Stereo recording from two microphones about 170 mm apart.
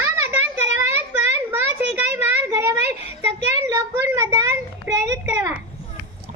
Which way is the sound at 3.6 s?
15° right (ahead or behind).